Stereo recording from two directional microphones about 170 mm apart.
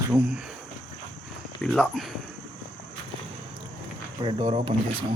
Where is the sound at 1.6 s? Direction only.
5° left (ahead or behind).